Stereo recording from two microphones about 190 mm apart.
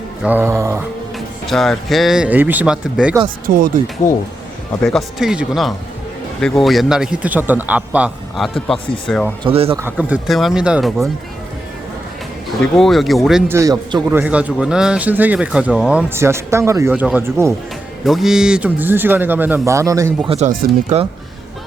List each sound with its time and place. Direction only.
0.2 s a man's voice: 10° right (ahead or behind)
1.5 s a man's voice: centre (ahead or behind)
3.4 s speech: 45° right (ahead or behind)
4.0 s speech: 15° left (ahead or behind)
4.8 s a man's voice: centre (ahead or behind)
9.4 s speech: 30° right (ahead or behind)
9.7 s a man's voice: 10° right (ahead or behind)
12.7 s a man's voice: centre (ahead or behind)
13.5 s a man's voice: 15° right (ahead or behind)
18.0 s a man's voice: centre (ahead or behind); by 20.1 s 15° right (ahead or behind)
20.2 s speech: 30° right (ahead or behind)